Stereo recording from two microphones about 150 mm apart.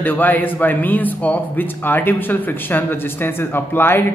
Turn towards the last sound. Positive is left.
turn(degrees=15)  # may be behind; listen again after turning